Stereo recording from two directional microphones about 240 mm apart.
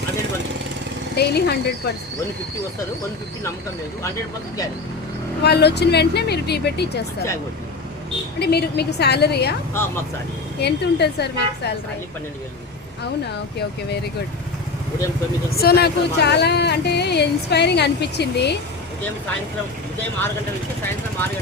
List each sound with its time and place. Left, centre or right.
1.1 s speech: left
5.4 s speech: left
8.4 s speech: left
9.7 s speech: centre
10.6 s speech: left
15.4 s speech: left